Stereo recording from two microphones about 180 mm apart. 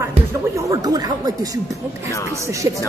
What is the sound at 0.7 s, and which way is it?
Speech, 20° right (ahead or behind).